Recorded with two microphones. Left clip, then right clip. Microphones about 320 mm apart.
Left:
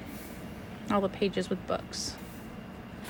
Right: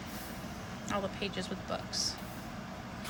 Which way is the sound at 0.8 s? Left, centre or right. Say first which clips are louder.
Left 7 dB; centre.